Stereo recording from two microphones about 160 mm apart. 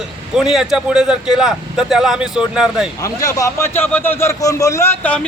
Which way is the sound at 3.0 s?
20° left (ahead or behind).